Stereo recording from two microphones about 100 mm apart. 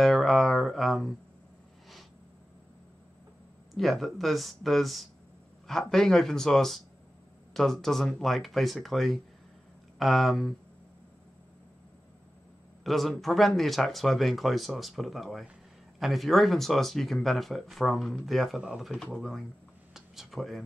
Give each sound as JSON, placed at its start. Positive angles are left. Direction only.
{"t": 0.0, "sound": "music", "side_deg": 0}
{"t": 3.7, "sound": "speech", "side_deg": 0}
{"t": 12.8, "sound": "speech", "side_deg": 0}
{"t": 19.9, "sound": "a sound", "side_deg": 0}